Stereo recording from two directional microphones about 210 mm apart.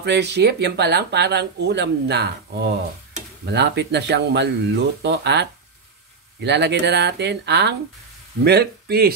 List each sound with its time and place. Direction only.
0.0 s speech: 55° right (ahead or behind)